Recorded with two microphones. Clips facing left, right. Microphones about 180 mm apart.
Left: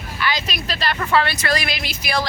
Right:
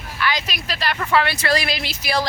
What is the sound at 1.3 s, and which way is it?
Speech, 30° right (ahead or behind).